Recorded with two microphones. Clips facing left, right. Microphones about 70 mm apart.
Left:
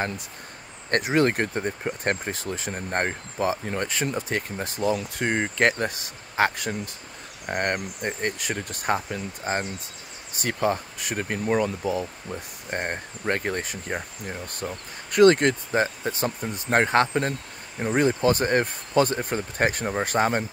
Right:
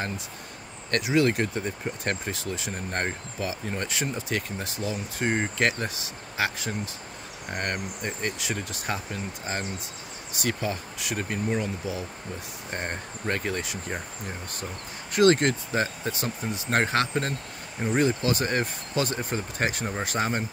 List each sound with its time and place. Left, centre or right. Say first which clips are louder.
0.8 s speech: left 2 dB; left
3.6 s speech: left 3 dB; left
5.2 s speech: left 2 dB; left
11.4 s speech: left 6 dB; left
11.8 s speech: left 6 dB; left